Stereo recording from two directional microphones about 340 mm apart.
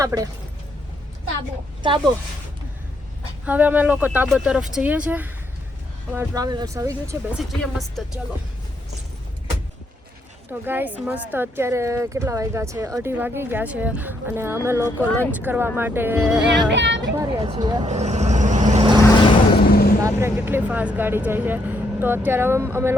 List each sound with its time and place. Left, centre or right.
0.0 s speech: centre
1.8 s speech: centre
3.4 s speech: centre
10.7 s speech: centre
16.7 s speech: right
17.0 s speech: centre
19.6 s vehicle: left
20.0 s speech: centre